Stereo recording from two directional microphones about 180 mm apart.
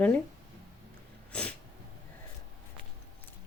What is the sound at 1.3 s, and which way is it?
Sneeze, 5° left (ahead or behind).